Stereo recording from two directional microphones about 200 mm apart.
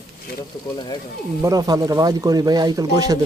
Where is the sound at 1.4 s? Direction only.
20° right (ahead or behind).